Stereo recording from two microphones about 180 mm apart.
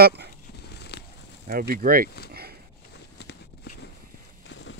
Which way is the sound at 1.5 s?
55° right (ahead or behind).